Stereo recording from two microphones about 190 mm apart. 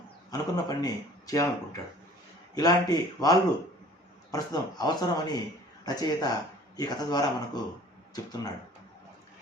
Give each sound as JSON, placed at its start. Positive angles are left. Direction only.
{"t": 0.3, "sound": "speech", "side_deg": 20}